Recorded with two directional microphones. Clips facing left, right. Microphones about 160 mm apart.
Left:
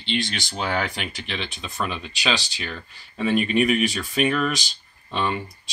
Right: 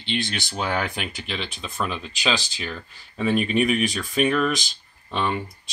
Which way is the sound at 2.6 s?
Centre (ahead or behind).